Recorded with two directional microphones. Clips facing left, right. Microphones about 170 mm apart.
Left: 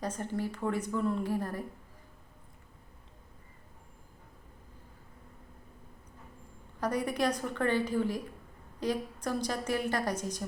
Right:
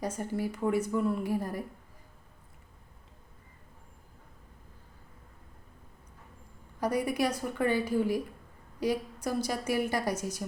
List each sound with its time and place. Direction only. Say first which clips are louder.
0.0 s a woman's voice: right 2 dB; 10° right (ahead or behind)
6.7 s a woman's voice: right 2 dB; 10° right (ahead or behind)